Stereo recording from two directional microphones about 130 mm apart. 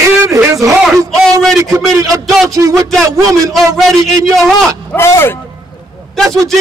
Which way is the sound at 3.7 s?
Centre (ahead or behind).